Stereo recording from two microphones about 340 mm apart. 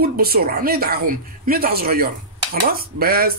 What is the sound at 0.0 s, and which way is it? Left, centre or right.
Speech, right.